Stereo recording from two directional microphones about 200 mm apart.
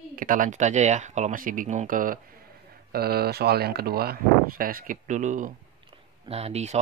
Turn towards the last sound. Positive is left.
turn(degrees=-35)  # may be behind; listen again after turning